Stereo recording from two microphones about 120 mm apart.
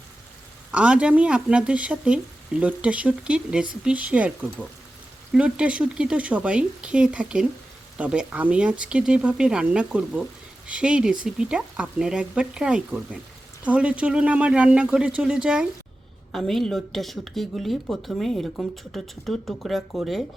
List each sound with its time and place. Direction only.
0.7 s speech: 10° right (ahead or behind)
5.3 s speech: 10° right (ahead or behind)